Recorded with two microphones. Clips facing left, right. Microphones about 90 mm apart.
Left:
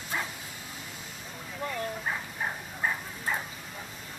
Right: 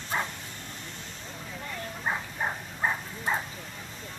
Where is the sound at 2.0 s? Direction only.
20° right (ahead or behind).